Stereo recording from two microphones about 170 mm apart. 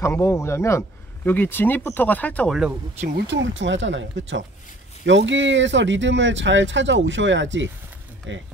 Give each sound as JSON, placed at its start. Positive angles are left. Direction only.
{"t": 0.0, "sound": "speech", "side_deg": 15}
{"t": 3.3, "sound": "speech", "side_deg": -90}